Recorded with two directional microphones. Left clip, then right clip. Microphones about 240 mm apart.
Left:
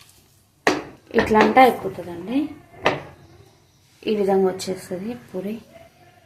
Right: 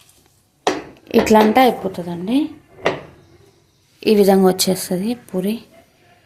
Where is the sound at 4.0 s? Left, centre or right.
Right.